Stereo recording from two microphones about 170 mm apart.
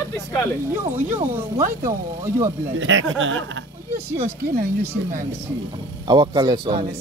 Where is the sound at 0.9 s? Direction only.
15° right (ahead or behind).